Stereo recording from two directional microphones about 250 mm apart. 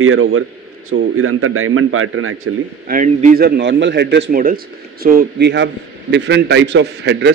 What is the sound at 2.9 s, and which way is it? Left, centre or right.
A man's voice, right.